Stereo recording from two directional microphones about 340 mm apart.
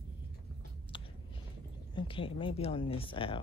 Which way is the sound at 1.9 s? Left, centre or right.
Centre.